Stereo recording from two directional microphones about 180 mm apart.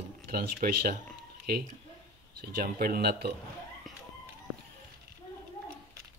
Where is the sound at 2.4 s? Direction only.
55° right (ahead or behind).